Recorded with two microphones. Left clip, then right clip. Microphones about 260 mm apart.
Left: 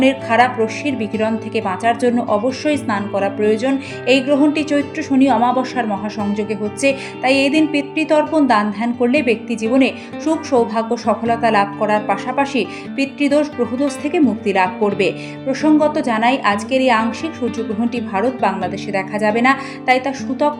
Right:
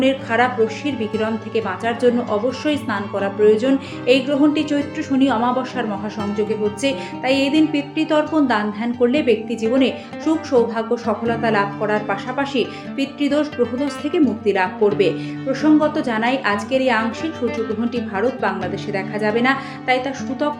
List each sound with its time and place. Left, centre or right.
0.0 s a woman's voice: left